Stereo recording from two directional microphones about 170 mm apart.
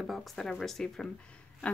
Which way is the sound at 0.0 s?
Centre (ahead or behind).